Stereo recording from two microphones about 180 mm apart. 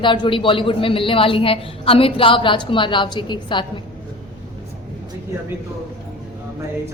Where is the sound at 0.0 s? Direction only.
25° left (ahead or behind).